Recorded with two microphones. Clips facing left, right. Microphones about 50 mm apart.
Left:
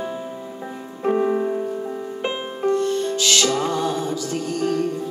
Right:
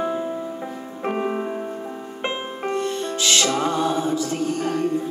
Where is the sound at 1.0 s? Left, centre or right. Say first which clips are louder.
Left 5 dB; right.